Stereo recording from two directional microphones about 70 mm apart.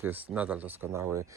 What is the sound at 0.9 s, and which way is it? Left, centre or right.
Speech, right.